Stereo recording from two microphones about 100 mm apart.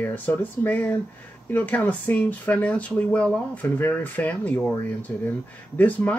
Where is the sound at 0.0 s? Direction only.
15° left (ahead or behind).